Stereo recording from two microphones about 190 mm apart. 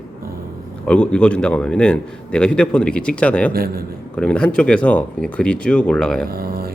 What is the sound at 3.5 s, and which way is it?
Speech, 50° right (ahead or behind).